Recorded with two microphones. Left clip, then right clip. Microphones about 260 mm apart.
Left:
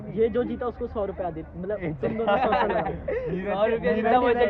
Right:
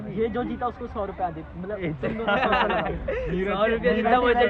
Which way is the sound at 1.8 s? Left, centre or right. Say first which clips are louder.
Even; left.